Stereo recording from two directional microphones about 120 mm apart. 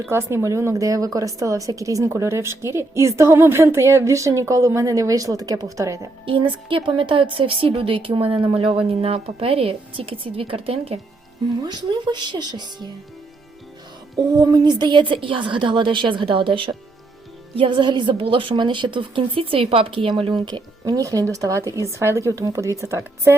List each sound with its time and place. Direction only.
0.0 s a woman's voice: 20° right (ahead or behind)
6.2 s a woman's voice: 45° right (ahead or behind)
11.6 s a woman's voice: 35° right (ahead or behind)
14.2 s a woman's voice: 35° right (ahead or behind)